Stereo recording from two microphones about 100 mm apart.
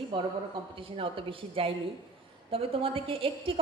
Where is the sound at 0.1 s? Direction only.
50° right (ahead or behind).